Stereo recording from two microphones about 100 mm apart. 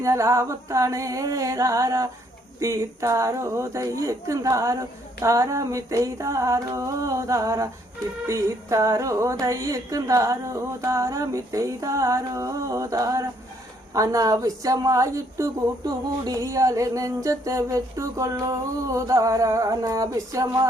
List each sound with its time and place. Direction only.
0.0 s a woman's voice: 30° right (ahead or behind)